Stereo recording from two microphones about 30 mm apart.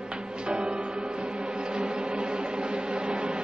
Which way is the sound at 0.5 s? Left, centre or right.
Right.